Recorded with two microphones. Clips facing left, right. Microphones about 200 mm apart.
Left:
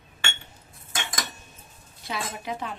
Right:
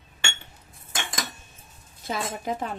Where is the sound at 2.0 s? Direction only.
45° right (ahead or behind).